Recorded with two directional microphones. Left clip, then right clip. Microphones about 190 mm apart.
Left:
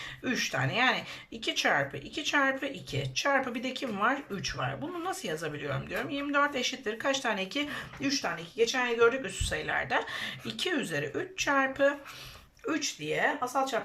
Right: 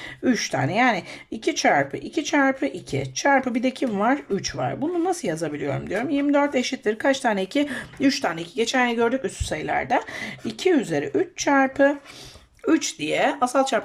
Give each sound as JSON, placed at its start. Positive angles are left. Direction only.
{"t": 0.3, "sound": "speech", "side_deg": -35}
{"t": 12.6, "sound": "speech", "side_deg": -50}